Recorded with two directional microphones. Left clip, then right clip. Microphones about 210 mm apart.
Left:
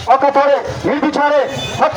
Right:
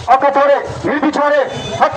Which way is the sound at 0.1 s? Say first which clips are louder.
Even; 50° left (ahead or behind).